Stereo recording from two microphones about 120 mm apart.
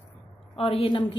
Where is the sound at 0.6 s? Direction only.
50° left (ahead or behind).